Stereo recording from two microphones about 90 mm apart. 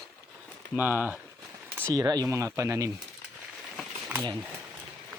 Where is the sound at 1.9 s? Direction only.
45° right (ahead or behind).